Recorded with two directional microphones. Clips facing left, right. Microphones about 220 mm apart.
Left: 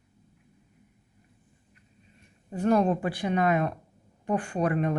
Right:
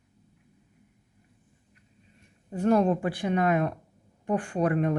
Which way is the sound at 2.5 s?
55° right (ahead or behind).